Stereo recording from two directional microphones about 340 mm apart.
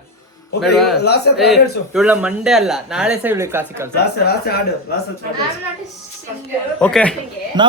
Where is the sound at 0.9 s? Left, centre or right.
Left.